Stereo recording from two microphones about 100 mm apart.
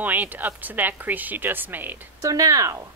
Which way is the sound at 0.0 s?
15° right (ahead or behind).